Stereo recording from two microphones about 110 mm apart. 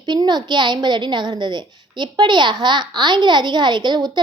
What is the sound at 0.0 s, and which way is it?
A woman's voice, 40° right (ahead or behind).